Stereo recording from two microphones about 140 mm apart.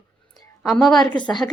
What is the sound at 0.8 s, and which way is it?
Speech, 5° left (ahead or behind).